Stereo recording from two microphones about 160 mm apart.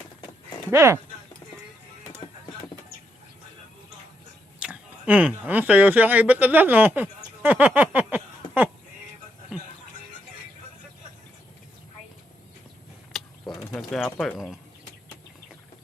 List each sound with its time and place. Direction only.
0.7 s speech: 15° right (ahead or behind)
4.6 s speech: 10° right (ahead or behind)
13.1 s a sound: centre (ahead or behind)
13.7 s speech: 5° left (ahead or behind)